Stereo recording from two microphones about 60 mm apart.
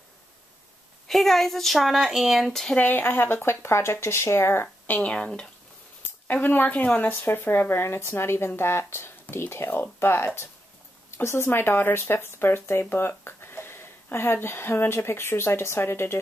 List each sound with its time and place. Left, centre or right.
1.0 s speech: centre
2.8 s speech: left
4.8 s speech: left
6.2 s speech: left